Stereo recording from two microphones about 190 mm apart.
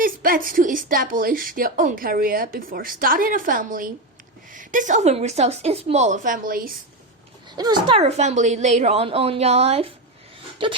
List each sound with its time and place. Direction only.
0.0 s a woman's voice: 50° right (ahead or behind)
7.5 s a woman's voice: 20° right (ahead or behind)